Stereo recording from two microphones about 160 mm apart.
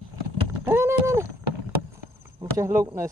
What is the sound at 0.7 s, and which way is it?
Rowboat, 15° right (ahead or behind).